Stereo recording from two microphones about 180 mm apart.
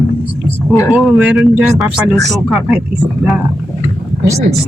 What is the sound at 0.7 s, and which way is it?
Speech, 15° left (ahead or behind).